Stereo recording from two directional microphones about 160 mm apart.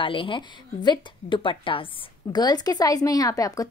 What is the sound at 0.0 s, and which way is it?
A woman's voice, 35° left (ahead or behind).